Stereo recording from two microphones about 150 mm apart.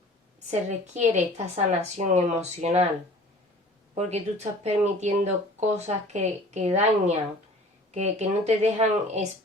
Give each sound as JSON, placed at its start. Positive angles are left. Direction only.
{"t": 0.3, "sound": "a woman's voice", "side_deg": -50}
{"t": 3.9, "sound": "a woman's voice", "side_deg": -45}